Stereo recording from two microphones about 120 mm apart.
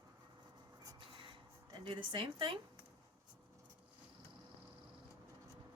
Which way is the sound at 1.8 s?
45° right (ahead or behind).